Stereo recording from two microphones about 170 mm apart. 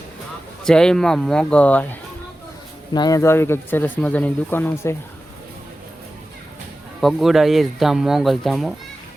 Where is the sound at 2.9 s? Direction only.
20° left (ahead or behind).